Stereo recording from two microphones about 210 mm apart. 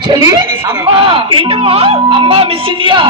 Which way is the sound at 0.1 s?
15° right (ahead or behind).